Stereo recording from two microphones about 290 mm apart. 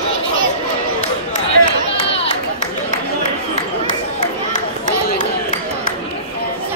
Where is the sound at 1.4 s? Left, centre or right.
Centre.